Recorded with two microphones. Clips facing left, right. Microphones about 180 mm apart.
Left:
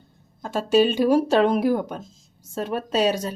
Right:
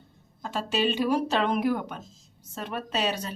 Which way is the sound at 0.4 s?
45° left (ahead or behind).